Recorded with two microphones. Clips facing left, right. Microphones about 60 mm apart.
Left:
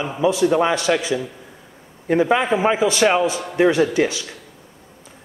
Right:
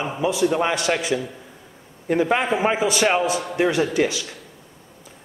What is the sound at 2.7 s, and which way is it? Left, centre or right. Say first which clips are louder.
Speech: left 3 dB; right.